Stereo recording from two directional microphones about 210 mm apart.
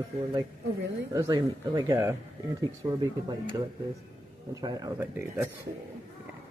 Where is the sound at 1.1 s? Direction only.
15° right (ahead or behind).